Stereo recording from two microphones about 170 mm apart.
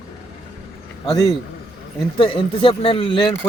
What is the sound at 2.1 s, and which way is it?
Speech, 30° left (ahead or behind).